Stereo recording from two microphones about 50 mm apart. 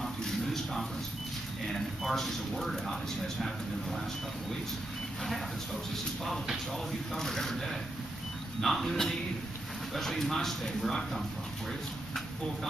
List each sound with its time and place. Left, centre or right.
0.0 s a sound: centre
1.7 s speech: centre
6.9 s speech: centre